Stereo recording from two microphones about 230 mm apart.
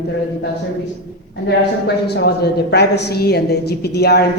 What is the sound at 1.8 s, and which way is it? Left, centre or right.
A woman's voice, left.